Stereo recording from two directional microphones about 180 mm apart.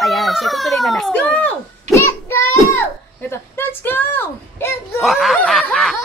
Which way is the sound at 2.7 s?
15° left (ahead or behind).